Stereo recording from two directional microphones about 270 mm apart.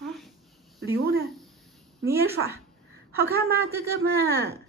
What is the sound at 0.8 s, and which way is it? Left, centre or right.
Speech, right.